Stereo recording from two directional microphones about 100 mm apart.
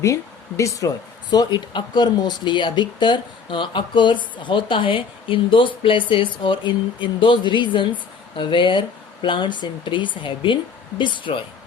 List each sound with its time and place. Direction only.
0.0 s speech: 30° left (ahead or behind)
1.3 s speech: 45° left (ahead or behind)